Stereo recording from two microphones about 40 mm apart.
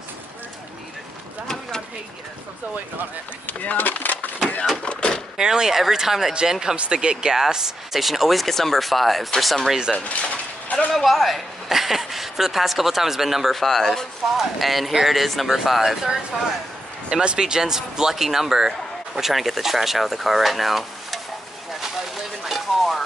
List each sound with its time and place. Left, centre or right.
3.4 s speech: left
4.8 s door: left
5.4 s a woman's voice: centre
9.9 s a sound: left
10.9 s a woman's voice: centre
13.6 s speech: centre
14.3 s a woman's voice: centre
17.1 s speech: right; by 21.2 s centre
22.4 s a sound: centre